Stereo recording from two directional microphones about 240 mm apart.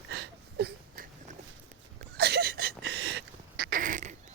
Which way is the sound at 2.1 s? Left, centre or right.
Right.